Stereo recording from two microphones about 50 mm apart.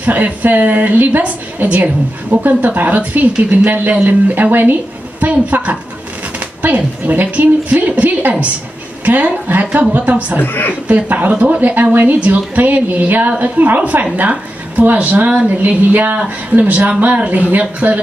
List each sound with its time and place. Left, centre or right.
0.0 s speech: right
5.2 s speech: right
10.4 s a woman's voice: left
10.9 s speech: right
11.6 s a woman's voice: right